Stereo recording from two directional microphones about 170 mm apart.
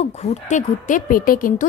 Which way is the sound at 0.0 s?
40° left (ahead or behind).